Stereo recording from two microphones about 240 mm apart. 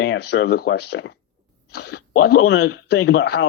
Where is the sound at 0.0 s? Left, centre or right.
Left.